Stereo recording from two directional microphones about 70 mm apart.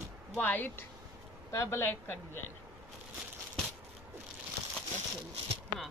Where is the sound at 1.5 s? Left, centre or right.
Left.